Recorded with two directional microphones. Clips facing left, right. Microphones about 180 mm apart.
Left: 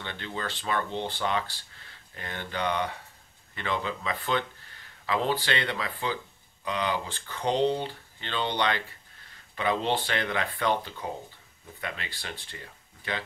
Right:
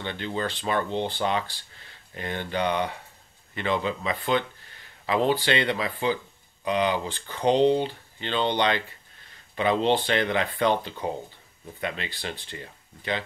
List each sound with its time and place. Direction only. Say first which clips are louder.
0.0 s speech: right 6 dB; 20° right (ahead or behind)